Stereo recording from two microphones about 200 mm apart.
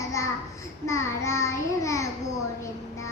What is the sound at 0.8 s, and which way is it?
Child singing, 15° left (ahead or behind).